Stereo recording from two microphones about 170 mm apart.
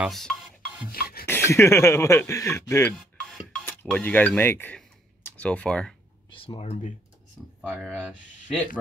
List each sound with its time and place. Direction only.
0.0 s rub: centre (ahead or behind)
0.8 s rub: 60° left (ahead or behind)
1.2 s speech: 15° left (ahead or behind)
6.3 s speech: 35° left (ahead or behind)
7.6 s speech: 5° right (ahead or behind)